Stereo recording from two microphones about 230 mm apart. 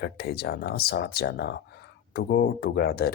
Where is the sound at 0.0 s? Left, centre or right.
Left.